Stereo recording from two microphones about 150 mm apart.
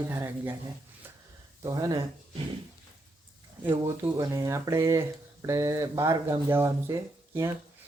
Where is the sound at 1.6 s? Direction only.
25° right (ahead or behind).